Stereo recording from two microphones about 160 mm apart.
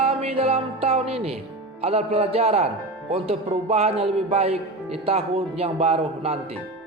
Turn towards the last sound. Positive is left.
turn(degrees=-40)  # may be behind; listen again after turning